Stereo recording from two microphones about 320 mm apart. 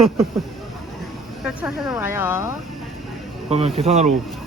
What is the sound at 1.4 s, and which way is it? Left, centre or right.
Speech, centre.